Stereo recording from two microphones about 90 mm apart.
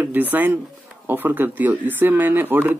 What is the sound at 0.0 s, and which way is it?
Speech, 20° right (ahead or behind).